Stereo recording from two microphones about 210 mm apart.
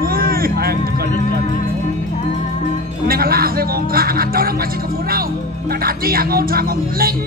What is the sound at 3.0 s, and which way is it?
Speech, 45° right (ahead or behind).